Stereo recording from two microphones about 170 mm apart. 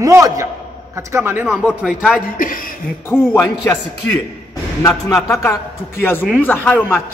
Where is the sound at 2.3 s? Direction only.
55° left (ahead or behind).